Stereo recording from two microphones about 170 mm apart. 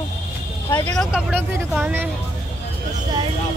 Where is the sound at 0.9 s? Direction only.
Centre (ahead or behind).